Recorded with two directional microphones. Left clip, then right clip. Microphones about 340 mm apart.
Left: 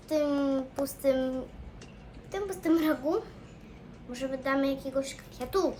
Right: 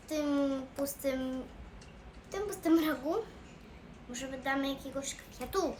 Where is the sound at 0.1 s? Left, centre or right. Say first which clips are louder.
Left 5 dB; centre.